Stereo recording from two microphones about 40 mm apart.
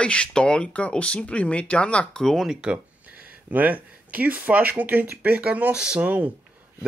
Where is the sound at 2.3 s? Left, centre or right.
Centre.